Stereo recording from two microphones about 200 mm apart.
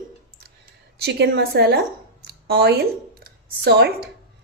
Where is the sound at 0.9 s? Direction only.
55° right (ahead or behind).